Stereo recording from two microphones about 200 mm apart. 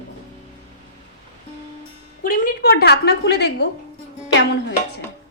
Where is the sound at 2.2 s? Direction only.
45° left (ahead or behind).